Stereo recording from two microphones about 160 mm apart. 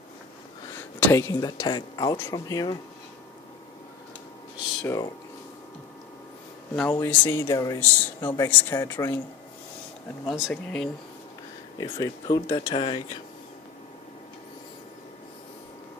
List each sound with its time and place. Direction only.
0.9 s speech: 15° left (ahead or behind)
4.8 s speech: 20° left (ahead or behind)
6.7 s speech: 10° left (ahead or behind)
10.5 s speech: 5° left (ahead or behind)
11.8 s speech: 25° left (ahead or behind)